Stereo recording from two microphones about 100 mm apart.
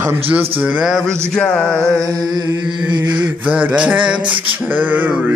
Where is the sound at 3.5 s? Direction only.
15° right (ahead or behind).